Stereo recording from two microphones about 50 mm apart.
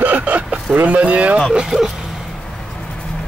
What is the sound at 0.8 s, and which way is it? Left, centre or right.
Speech, right.